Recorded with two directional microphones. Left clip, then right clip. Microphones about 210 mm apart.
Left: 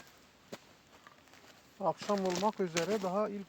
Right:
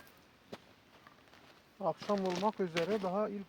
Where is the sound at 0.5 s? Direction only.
45° left (ahead or behind).